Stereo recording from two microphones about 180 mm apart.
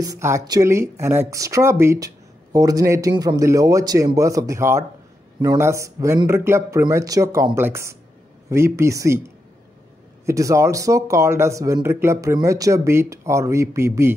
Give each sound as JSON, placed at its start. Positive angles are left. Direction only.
{"t": 0.0, "sound": "speech", "side_deg": -15}
{"t": 10.2, "sound": "speech", "side_deg": -15}